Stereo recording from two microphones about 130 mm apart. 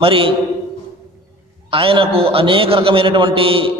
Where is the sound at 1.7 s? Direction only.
45° right (ahead or behind).